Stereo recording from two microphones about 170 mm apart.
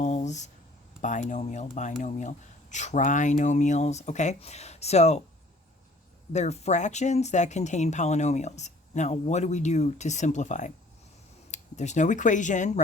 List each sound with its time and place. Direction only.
0.0 s a sound: 45° left (ahead or behind)
1.0 s speech: 45° left (ahead or behind)
6.3 s speech: 40° left (ahead or behind)